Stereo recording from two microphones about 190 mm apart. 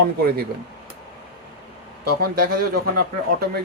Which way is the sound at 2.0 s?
50° right (ahead or behind).